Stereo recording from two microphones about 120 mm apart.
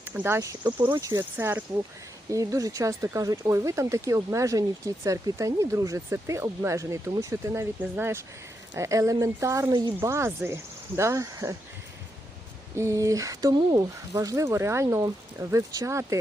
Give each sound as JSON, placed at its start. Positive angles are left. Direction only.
{"t": 0.1, "sound": "speech", "side_deg": -15}
{"t": 0.3, "sound": "speech", "side_deg": -25}
{"t": 1.2, "sound": "speech", "side_deg": -15}
{"t": 2.3, "sound": "speech", "side_deg": -25}
{"t": 12.7, "sound": "speech", "side_deg": -25}